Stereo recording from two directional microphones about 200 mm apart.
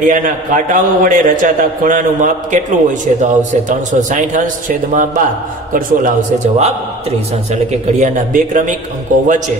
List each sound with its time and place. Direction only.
0.0 s a man's voice: 40° right (ahead or behind)